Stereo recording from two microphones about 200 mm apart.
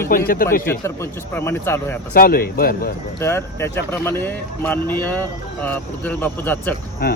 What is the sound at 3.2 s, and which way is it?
Speech, 10° left (ahead or behind).